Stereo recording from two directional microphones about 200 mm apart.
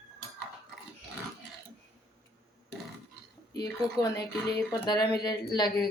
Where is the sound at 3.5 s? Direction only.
20° left (ahead or behind).